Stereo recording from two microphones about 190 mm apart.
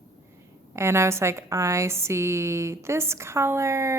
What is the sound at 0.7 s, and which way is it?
A woman's voice, 15° right (ahead or behind).